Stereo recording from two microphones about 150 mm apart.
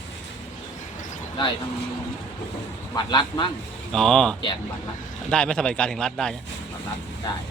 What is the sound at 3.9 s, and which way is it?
Speech, 5° left (ahead or behind).